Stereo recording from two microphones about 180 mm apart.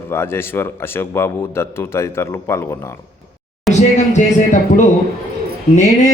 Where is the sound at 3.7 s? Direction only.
40° left (ahead or behind).